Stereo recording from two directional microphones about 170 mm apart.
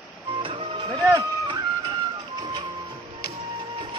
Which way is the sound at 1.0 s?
20° right (ahead or behind).